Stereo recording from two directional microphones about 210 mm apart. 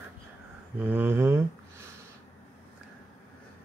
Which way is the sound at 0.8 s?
10° right (ahead or behind).